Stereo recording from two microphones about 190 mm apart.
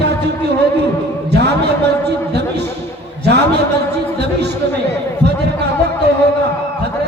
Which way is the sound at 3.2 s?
60° right (ahead or behind).